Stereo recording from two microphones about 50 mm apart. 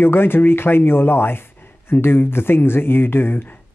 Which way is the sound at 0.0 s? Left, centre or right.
Left.